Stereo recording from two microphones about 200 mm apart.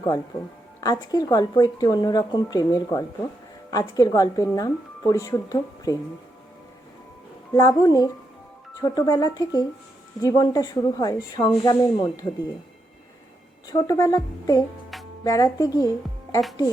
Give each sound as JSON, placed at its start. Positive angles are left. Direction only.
{"t": 0.8, "sound": "speech", "side_deg": 20}
{"t": 7.5, "sound": "speech", "side_deg": 15}
{"t": 13.7, "sound": "speech", "side_deg": 20}